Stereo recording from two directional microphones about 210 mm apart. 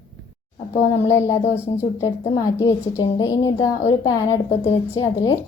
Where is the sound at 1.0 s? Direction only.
15° left (ahead or behind).